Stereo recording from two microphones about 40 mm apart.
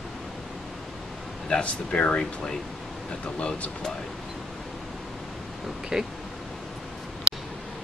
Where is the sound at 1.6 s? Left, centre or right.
Left.